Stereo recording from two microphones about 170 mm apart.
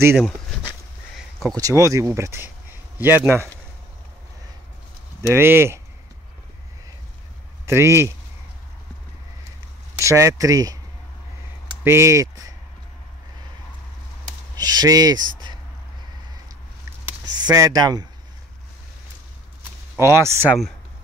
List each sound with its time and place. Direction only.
1.5 s speech: 20° right (ahead or behind)
5.3 s speech: 15° right (ahead or behind)
7.6 s speech: 15° right (ahead or behind)
9.9 s speech: 15° right (ahead or behind)
11.8 s speech: 15° right (ahead or behind)
14.6 s speech: 20° right (ahead or behind)
15.3 s a sound: 25° right (ahead or behind)
17.4 s speech: 20° right (ahead or behind)
20.0 s speech: 15° right (ahead or behind)